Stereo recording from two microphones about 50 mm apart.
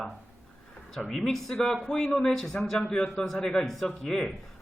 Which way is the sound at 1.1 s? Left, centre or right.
Centre.